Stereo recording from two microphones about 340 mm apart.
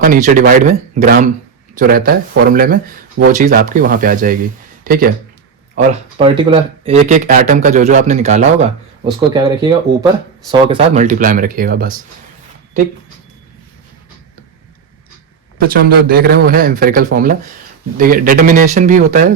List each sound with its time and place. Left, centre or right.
0.0 s speech: right
15.6 s speech: right